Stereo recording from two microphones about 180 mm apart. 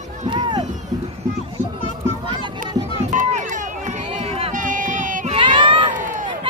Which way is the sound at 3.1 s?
45° right (ahead or behind).